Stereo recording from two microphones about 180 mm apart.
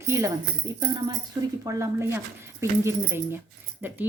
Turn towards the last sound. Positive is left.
turn(degrees=-10)  # may be behind; listen again after turning